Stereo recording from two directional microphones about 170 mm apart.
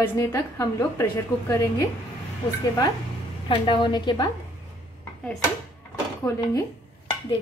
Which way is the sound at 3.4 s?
30° left (ahead or behind).